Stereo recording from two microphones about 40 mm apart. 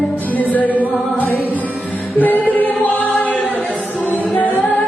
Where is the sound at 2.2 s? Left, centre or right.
Left.